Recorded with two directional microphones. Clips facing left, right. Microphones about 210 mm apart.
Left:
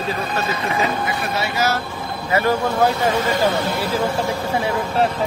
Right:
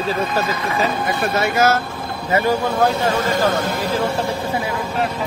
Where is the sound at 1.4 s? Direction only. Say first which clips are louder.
Right 5 dB; 50° right (ahead or behind).